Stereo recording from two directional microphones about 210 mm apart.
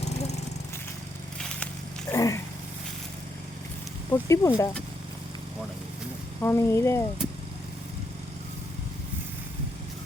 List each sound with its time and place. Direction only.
0.0 s lawn mower: 30° left (ahead or behind)
2.0 s dog: 15° left (ahead or behind)
4.1 s speech: 15° left (ahead or behind)
6.4 s speech: 10° left (ahead or behind)